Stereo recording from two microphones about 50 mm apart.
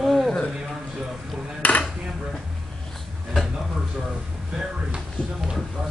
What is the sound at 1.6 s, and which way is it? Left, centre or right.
Dishes, left.